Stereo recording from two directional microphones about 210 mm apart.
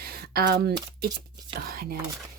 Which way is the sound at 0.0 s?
45° right (ahead or behind).